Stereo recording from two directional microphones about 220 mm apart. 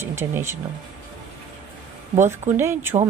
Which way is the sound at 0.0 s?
10° right (ahead or behind).